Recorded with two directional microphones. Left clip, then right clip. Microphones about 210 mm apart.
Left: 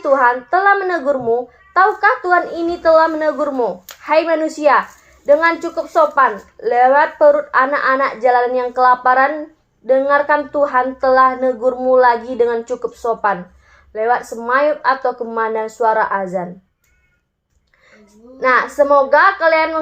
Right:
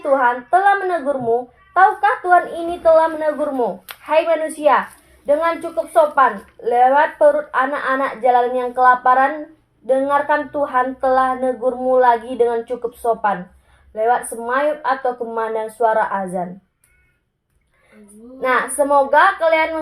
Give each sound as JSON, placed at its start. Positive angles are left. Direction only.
{"t": 0.0, "sound": "a woman's voice", "side_deg": 25}
{"t": 4.0, "sound": "a woman's voice", "side_deg": 20}
{"t": 18.3, "sound": "a woman's voice", "side_deg": 20}